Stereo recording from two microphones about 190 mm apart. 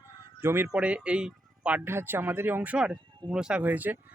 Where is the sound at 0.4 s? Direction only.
10° right (ahead or behind).